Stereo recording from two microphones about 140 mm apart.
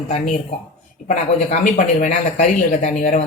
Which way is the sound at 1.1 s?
60° left (ahead or behind).